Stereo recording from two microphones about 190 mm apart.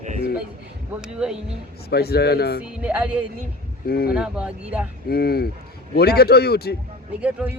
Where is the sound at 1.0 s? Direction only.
5° right (ahead or behind).